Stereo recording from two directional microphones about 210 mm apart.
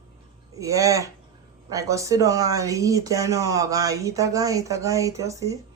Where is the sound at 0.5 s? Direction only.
15° right (ahead or behind).